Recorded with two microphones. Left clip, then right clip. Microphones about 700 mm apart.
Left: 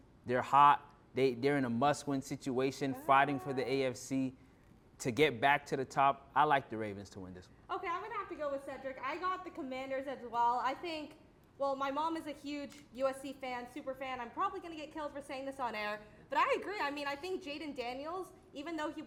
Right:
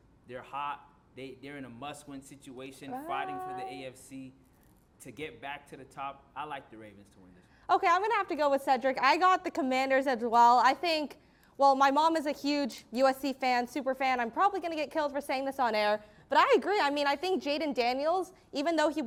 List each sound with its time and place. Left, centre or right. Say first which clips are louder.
0.3 s speech: left 12 dB; left
7.7 s a woman's voice: right 13 dB; right